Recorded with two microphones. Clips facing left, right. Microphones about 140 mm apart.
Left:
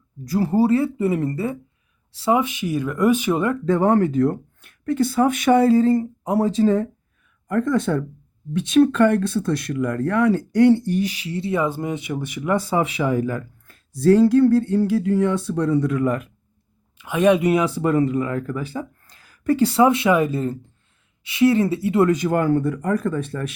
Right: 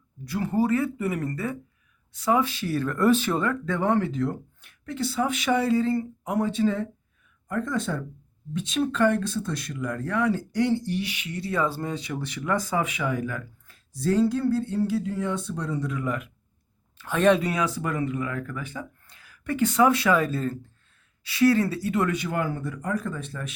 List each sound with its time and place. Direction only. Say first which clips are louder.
0.3 s speech: left 6 dB; 35° left (ahead or behind); by 3.6 s 20° left (ahead or behind)
3.7 s speech: left 8 dB; 40° left (ahead or behind)
7.4 s speech: left 8 dB; 65° left (ahead or behind); by 13.4 s 35° left (ahead or behind)
13.7 s speech: left 10 dB; 60° left (ahead or behind)
16.0 s speech: left 7 dB; 45° left (ahead or behind)
17.0 s speech: left 4 dB; 10° left (ahead or behind)
17.5 s speech: left 9 dB; 25° left (ahead or behind)
22.1 s speech: left 9 dB; 45° left (ahead or behind); by 23.5 s 60° left (ahead or behind)